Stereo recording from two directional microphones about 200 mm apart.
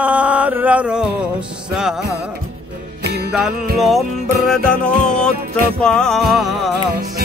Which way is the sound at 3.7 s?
Centre (ahead or behind).